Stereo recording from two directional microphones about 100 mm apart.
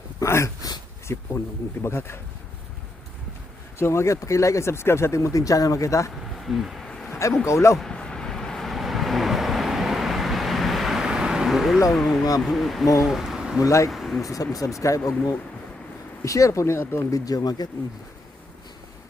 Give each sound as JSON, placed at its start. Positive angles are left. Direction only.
{"t": 0.2, "sound": "a sound", "side_deg": 30}
{"t": 1.0, "sound": "speech", "side_deg": 25}
{"t": 3.8, "sound": "speech", "side_deg": 25}
{"t": 6.3, "sound": "a sound", "side_deg": 0}
{"t": 7.1, "sound": "a sound", "side_deg": 30}
{"t": 7.4, "sound": "speech", "side_deg": 30}
{"t": 7.8, "sound": "vehicle", "side_deg": 5}
{"t": 11.9, "sound": "speech", "side_deg": 0}
{"t": 12.8, "sound": "speech", "side_deg": 30}
{"t": 13.1, "sound": "speech", "side_deg": -5}
{"t": 13.6, "sound": "speech", "side_deg": 30}
{"t": 13.9, "sound": "speech", "side_deg": 0}
{"t": 14.2, "sound": "speech", "side_deg": 35}
{"t": 17.1, "sound": "speech", "side_deg": 35}